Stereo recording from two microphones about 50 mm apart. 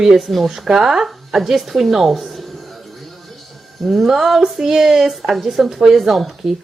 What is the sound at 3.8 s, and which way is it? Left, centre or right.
Speech, centre.